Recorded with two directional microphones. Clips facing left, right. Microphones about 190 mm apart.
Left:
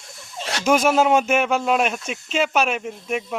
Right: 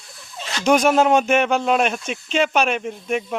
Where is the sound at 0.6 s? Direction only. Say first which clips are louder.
Right 2 dB; 5° left (ahead or behind).